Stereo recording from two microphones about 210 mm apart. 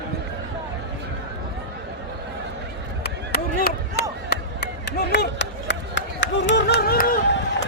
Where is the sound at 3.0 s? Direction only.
50° left (ahead or behind).